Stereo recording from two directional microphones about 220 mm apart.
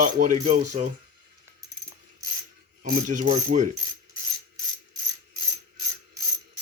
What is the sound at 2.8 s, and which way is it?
Speech, 35° right (ahead or behind).